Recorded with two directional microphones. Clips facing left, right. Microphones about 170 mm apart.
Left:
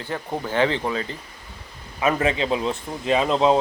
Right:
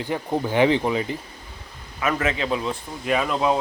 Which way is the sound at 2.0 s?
25° left (ahead or behind).